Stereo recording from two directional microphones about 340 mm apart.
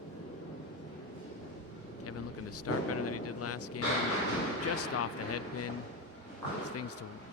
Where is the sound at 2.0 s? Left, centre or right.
Left.